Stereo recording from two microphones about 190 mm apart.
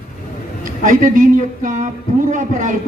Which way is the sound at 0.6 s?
45° right (ahead or behind).